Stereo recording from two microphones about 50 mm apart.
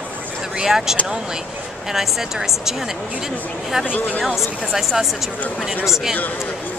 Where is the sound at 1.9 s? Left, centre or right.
Centre.